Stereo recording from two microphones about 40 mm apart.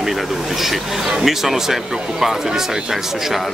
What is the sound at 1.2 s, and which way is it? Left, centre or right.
Speech, centre.